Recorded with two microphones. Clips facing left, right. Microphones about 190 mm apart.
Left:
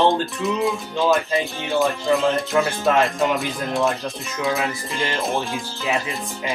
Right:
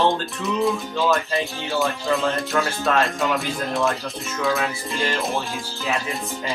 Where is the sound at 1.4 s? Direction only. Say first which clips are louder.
Left 3 dB; centre (ahead or behind).